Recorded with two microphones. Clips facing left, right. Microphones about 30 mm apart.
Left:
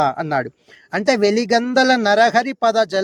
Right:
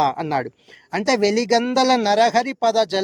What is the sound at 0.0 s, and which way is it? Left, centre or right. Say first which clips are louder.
Speech: left 1 dB; centre.